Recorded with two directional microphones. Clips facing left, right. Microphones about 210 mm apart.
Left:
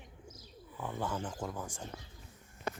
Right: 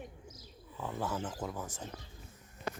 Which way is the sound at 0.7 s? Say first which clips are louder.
Even; centre (ahead or behind).